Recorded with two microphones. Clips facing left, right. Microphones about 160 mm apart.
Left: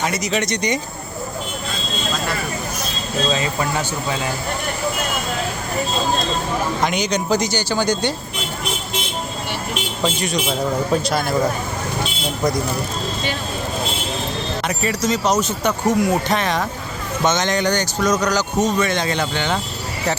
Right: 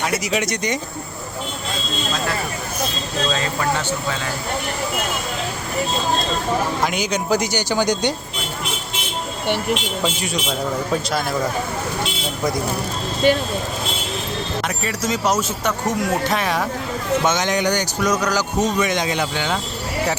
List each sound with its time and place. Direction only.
0.0 s speech: 5° right (ahead or behind)
6.8 s speech: 5° right (ahead or behind)
10.0 s speech: 5° right (ahead or behind)
13.2 s speech: 50° right (ahead or behind)
14.8 s speech: 5° right (ahead or behind)